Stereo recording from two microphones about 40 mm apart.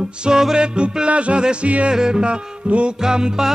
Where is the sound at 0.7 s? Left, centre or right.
Right.